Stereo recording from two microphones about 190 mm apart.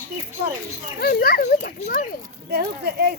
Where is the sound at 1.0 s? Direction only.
55° left (ahead or behind).